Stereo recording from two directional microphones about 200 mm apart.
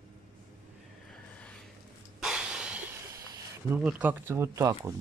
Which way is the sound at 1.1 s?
5° left (ahead or behind).